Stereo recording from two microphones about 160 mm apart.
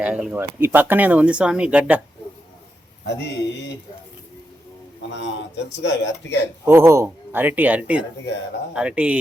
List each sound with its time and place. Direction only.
0.0 s speech: 10° right (ahead or behind)
3.1 s a man's voice: 90° left
5.1 s a man's voice: 90° left
6.7 s speech: 15° right (ahead or behind)